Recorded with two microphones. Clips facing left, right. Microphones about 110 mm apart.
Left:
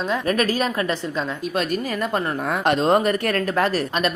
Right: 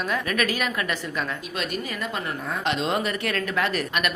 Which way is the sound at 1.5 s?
45° left (ahead or behind).